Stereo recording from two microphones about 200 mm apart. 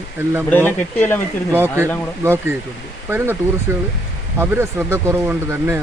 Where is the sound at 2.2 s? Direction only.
10° right (ahead or behind).